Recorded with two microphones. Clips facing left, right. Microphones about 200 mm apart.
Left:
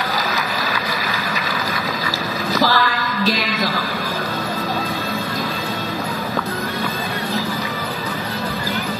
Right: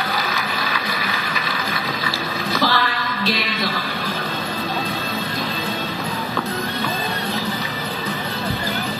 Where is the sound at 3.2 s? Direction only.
40° left (ahead or behind).